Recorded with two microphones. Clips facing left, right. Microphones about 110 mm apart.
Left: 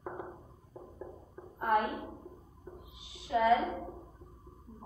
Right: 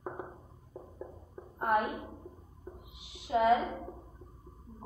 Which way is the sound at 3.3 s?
20° right (ahead or behind).